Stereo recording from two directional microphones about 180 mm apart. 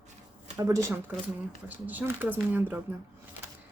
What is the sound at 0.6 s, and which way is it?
Speech, 20° right (ahead or behind).